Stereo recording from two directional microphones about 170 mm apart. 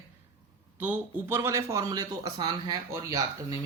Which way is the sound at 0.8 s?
10° right (ahead or behind).